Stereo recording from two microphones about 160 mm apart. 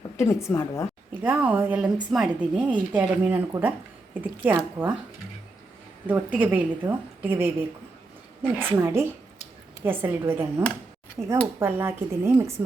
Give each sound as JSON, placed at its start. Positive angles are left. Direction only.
{"t": 0.2, "sound": "a woman's voice", "side_deg": 15}
{"t": 1.1, "sound": "a woman's voice", "side_deg": -10}
{"t": 6.1, "sound": "speech", "side_deg": -10}